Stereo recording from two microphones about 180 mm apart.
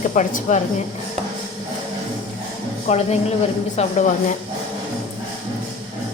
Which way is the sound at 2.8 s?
35° left (ahead or behind).